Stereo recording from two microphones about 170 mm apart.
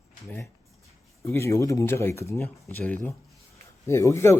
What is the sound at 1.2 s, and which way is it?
A man's voice, 15° left (ahead or behind).